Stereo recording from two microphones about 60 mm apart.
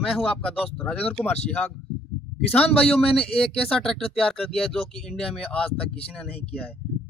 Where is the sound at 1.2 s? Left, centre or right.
Left.